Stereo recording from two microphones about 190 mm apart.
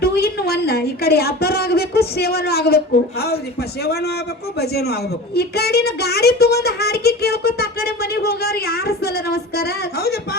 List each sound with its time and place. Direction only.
0.0 s a woman's voice: 55° left (ahead or behind)
4.6 s a woman's voice: 55° left (ahead or behind)